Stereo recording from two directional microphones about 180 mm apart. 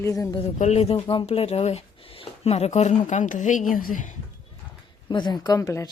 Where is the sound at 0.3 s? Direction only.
35° left (ahead or behind).